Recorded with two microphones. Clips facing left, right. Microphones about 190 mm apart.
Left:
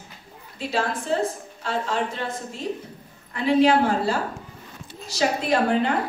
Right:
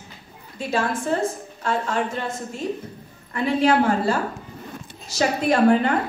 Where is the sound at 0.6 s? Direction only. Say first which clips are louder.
Right 2 dB; 50° right (ahead or behind).